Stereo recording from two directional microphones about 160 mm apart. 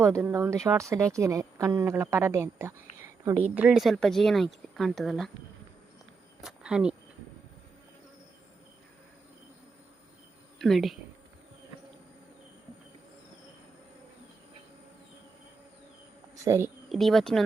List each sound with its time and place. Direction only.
0.0 s speech: 20° right (ahead or behind); by 5.3 s centre (ahead or behind)
6.4 s speech: 5° right (ahead or behind)
10.6 s speech: centre (ahead or behind)
16.4 s speech: 15° right (ahead or behind)
16.9 s speech: centre (ahead or behind)